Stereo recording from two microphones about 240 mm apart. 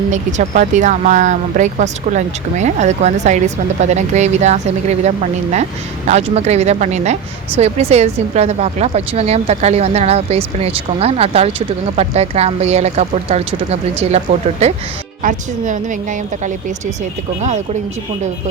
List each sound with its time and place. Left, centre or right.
0.1 s speech: right
15.2 s speech: right